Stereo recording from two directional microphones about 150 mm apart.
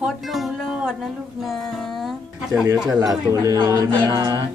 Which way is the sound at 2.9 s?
25° right (ahead or behind).